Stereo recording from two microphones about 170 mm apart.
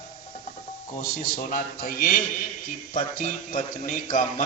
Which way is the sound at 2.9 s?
50° left (ahead or behind).